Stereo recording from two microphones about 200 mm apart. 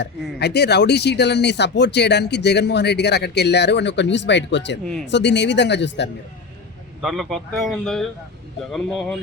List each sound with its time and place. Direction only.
0.0 s speech: 55° left (ahead or behind)
7.0 s speech: centre (ahead or behind)